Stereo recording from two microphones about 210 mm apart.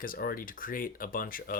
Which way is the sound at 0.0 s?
45° left (ahead or behind).